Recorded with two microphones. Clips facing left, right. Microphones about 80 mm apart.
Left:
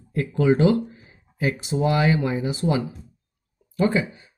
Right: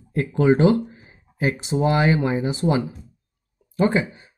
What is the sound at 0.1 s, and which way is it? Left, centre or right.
Speech, right.